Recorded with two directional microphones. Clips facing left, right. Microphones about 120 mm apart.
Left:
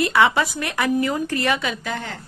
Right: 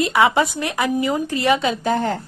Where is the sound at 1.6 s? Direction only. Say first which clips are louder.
Right 7 dB; 35° right (ahead or behind).